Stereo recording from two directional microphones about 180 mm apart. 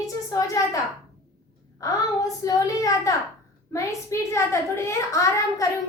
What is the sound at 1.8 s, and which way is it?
A woman's voice, 20° left (ahead or behind).